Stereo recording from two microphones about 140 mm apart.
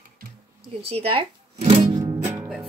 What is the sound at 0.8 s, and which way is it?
Speech, 45° right (ahead or behind).